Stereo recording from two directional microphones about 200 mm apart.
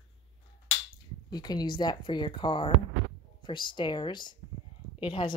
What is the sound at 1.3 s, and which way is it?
Speech, 20° left (ahead or behind).